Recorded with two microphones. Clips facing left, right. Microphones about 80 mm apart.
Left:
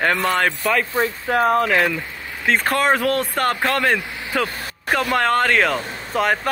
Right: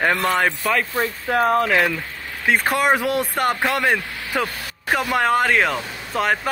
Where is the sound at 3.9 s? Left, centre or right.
Left.